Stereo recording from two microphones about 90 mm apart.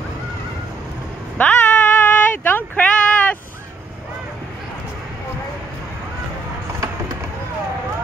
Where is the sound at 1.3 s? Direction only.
20° left (ahead or behind).